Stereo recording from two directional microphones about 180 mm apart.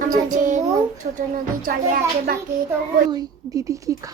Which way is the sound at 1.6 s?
55° right (ahead or behind).